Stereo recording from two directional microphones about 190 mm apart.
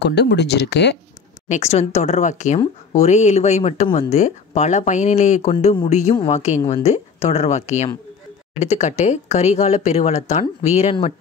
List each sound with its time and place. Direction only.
0.0 s speech: 60° left (ahead or behind)
1.5 s speech: 35° left (ahead or behind)